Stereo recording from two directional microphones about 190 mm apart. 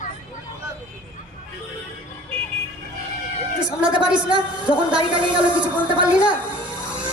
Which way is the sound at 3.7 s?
5° right (ahead or behind).